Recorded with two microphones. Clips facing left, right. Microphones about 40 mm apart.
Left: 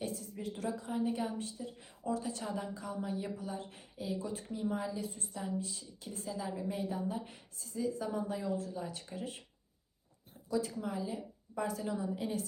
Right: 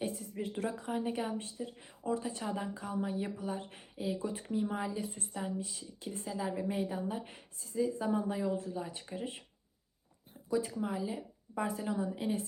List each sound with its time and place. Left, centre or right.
0.0 s a woman's voice: right
1.8 s speech: right
2.7 s a woman's voice: right
10.8 s speech: centre